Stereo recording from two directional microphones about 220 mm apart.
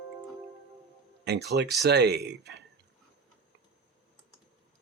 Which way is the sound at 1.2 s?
50° right (ahead or behind).